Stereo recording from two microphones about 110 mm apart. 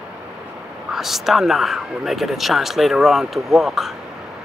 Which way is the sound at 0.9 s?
Centre (ahead or behind).